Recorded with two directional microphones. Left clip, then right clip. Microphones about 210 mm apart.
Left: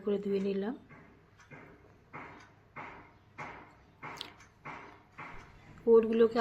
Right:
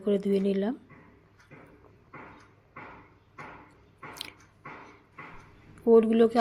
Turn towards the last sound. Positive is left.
turn(degrees=-30)  # may be behind; listen again after turning